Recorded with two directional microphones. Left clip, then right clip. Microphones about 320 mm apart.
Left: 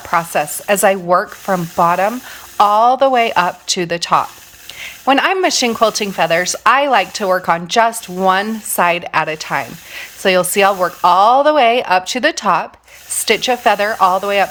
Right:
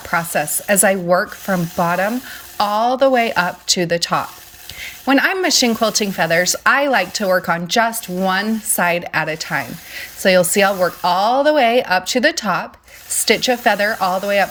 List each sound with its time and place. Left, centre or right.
0.1 s speech: centre